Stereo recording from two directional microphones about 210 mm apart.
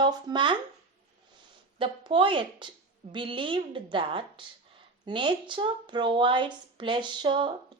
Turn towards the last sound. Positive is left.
turn(degrees=-25)  # may be behind; listen again after turning